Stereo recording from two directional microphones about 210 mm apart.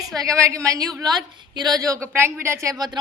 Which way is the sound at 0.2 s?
15° right (ahead or behind).